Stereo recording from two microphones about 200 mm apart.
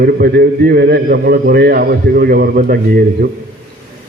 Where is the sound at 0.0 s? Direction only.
50° right (ahead or behind).